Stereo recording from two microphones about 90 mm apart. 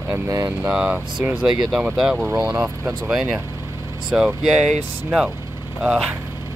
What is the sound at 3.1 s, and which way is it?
Speech, 10° right (ahead or behind).